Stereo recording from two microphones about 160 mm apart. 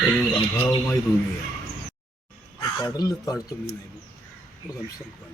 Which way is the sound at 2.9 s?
20° left (ahead or behind).